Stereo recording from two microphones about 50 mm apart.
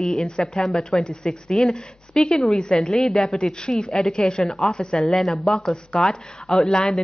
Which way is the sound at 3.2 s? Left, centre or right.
Centre.